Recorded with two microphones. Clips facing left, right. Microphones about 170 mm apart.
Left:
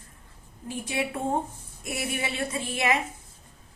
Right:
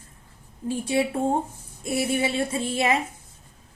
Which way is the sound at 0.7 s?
30° right (ahead or behind).